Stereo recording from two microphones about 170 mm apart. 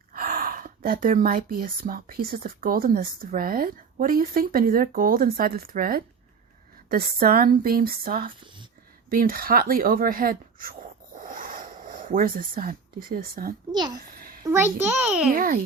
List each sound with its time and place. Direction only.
0.1 s speech: 60° right (ahead or behind)
13.7 s speech: 25° right (ahead or behind)
14.2 s a sound: 60° right (ahead or behind)
14.4 s a child's voice: 15° right (ahead or behind)
15.3 s speech: 55° right (ahead or behind)